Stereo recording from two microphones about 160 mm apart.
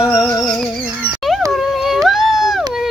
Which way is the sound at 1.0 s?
65° right (ahead or behind).